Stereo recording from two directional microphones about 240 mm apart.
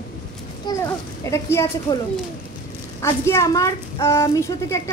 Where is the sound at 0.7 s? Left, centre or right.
Centre.